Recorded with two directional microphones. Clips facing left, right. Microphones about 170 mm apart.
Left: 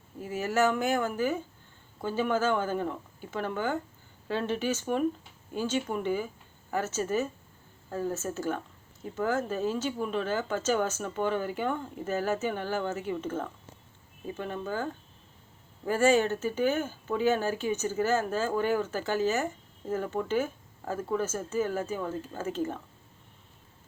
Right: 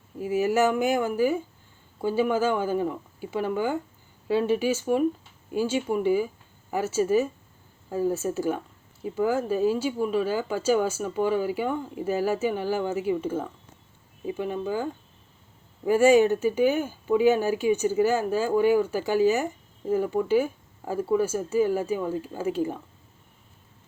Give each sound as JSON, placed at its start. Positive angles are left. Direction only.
{"t": 0.2, "sound": "speech", "side_deg": -15}
{"t": 15.9, "sound": "speech", "side_deg": -15}